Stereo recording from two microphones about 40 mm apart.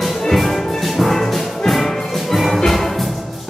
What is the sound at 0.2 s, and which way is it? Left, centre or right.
Music, centre.